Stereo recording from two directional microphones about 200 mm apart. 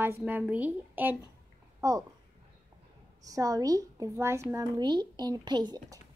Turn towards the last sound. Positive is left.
turn(degrees=-20)  # may be behind; listen again after turning